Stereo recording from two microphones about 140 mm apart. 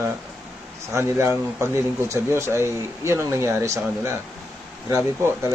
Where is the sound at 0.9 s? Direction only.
20° right (ahead or behind).